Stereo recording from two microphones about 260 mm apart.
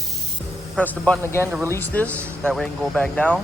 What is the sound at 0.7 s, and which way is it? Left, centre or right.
Speech, centre.